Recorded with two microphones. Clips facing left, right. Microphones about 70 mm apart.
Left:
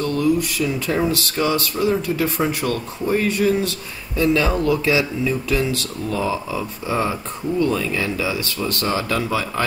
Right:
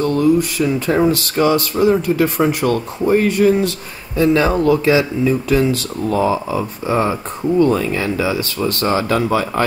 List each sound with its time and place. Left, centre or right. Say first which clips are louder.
0.0 s speech: right 5 dB; right
3.1 s speech: right 5 dB; right